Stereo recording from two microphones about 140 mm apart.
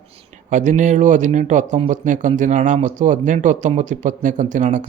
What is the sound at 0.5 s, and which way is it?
Speech, 60° right (ahead or behind).